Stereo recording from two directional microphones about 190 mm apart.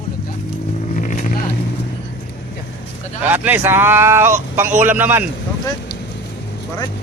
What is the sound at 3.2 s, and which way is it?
Speech, 10° right (ahead or behind).